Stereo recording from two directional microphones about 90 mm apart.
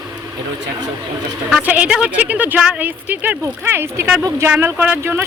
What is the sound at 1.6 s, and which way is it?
A woman's voice, 15° right (ahead or behind).